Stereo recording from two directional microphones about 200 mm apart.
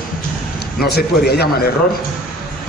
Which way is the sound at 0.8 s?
55° left (ahead or behind).